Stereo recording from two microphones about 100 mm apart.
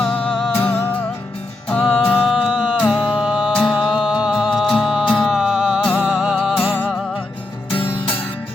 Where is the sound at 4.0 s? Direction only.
5° right (ahead or behind).